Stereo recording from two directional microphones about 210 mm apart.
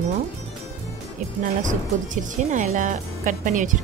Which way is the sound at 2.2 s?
35° right (ahead or behind).